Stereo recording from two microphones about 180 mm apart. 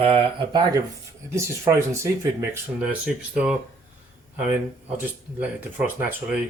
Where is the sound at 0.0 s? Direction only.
30° right (ahead or behind).